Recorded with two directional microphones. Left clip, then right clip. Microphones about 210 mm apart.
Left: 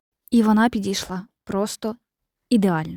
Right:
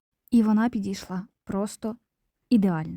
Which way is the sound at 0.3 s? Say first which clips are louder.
Left 5 dB; 25° left (ahead or behind).